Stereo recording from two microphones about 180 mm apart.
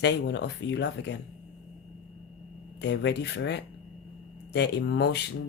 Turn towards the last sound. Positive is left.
turn(degrees=70)  # may be behind; listen again after turning